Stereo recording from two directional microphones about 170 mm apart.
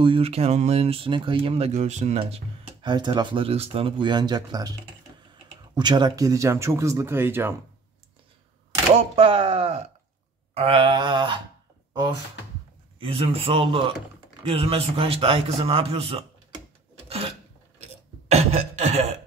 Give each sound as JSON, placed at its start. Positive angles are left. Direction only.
{"t": 0.0, "sound": "a man's voice", "side_deg": -35}
{"t": 1.7, "sound": "speech", "side_deg": -45}
{"t": 5.8, "sound": "speech", "side_deg": -25}
{"t": 9.1, "sound": "a man's voice", "side_deg": -35}
{"t": 13.0, "sound": "a man's voice", "side_deg": -35}
{"t": 18.3, "sound": "cough", "side_deg": -40}